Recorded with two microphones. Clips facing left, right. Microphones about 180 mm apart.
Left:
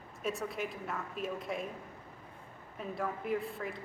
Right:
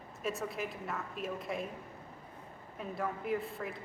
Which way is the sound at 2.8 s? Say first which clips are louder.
Even; centre (ahead or behind).